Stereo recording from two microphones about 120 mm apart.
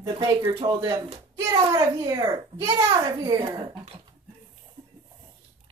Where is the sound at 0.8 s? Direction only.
30° right (ahead or behind).